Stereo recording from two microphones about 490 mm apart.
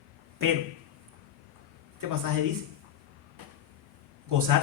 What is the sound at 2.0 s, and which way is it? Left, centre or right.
Speech, right.